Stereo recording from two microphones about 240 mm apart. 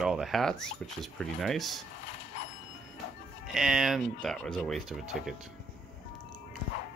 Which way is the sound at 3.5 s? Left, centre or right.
Centre.